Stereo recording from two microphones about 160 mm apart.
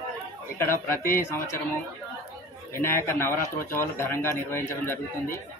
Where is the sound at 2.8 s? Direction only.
15° left (ahead or behind).